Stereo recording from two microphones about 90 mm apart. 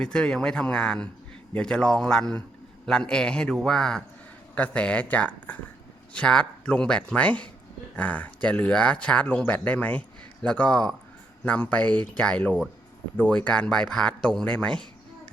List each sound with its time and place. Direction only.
0.0 s speech: 5° left (ahead or behind)